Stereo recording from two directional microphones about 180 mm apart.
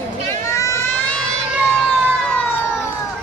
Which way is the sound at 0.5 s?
15° left (ahead or behind).